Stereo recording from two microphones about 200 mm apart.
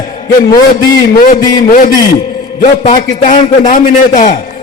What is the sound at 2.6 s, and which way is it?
A man's voice, 35° left (ahead or behind).